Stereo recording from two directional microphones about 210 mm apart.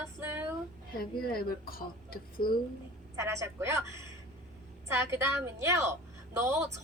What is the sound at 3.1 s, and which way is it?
A woman's voice, 15° right (ahead or behind).